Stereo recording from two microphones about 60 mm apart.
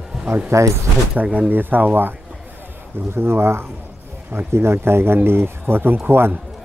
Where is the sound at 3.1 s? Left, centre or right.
Right.